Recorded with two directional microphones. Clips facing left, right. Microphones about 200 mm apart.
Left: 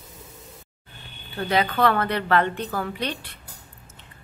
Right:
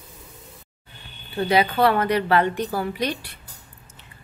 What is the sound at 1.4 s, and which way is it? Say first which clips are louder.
A woman's voice: right 3 dB; 10° right (ahead or behind).